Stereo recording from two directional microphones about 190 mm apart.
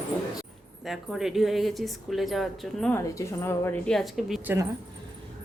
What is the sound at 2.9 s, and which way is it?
Speech, 10° left (ahead or behind).